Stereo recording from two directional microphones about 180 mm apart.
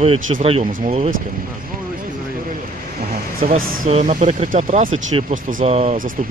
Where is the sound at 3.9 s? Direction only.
40° right (ahead or behind).